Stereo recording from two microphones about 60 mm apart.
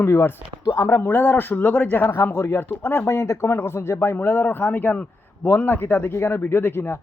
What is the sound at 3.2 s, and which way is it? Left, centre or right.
A man's voice, left.